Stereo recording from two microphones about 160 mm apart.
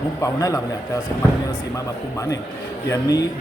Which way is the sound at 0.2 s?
20° left (ahead or behind).